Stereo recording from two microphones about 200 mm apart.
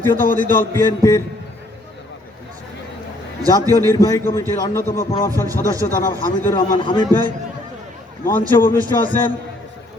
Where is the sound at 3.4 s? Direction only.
15° right (ahead or behind).